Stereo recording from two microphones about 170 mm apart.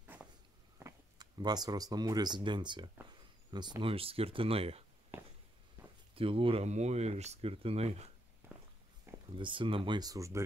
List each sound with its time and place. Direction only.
0.0 s a sound: 10° right (ahead or behind)
0.8 s speech: 25° right (ahead or behind)
5.8 s walk: 15° right (ahead or behind)
6.1 s speech: 35° right (ahead or behind)
8.5 s walk: 5° right (ahead or behind)
9.1 s a sound: 15° right (ahead or behind)
9.4 s speech: 30° right (ahead or behind)